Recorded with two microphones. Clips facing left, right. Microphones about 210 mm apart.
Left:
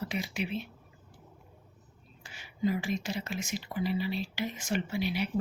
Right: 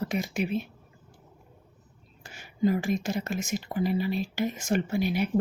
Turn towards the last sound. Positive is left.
turn(degrees=-50)  # may be behind; listen again after turning